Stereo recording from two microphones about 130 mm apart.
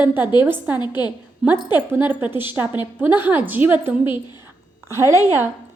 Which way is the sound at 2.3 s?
40° left (ahead or behind).